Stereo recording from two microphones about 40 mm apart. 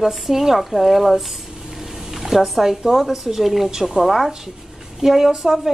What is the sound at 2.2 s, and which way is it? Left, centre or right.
A woman's voice, centre.